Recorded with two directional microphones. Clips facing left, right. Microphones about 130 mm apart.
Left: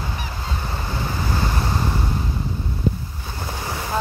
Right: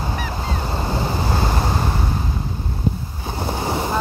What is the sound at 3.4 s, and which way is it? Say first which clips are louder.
Boat: right 6 dB; 65° right (ahead or behind).